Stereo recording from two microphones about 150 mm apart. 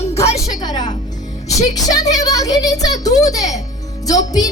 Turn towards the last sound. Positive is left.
turn(degrees=25)  # may be behind; listen again after turning